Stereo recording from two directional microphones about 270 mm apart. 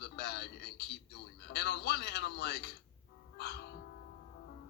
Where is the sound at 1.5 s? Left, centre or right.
Left.